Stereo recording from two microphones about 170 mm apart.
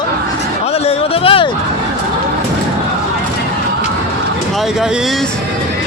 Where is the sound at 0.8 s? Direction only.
35° left (ahead or behind).